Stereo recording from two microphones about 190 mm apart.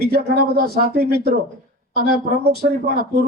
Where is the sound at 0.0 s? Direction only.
55° right (ahead or behind).